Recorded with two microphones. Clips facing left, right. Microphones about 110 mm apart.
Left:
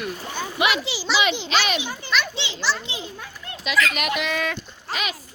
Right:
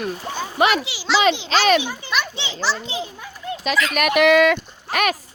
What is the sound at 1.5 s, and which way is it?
Speech, 40° right (ahead or behind).